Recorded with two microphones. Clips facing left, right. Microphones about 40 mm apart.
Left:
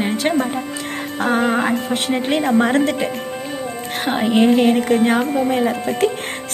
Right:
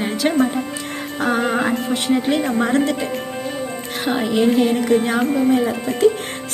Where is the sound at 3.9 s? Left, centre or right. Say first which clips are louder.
Left 1 dB; left.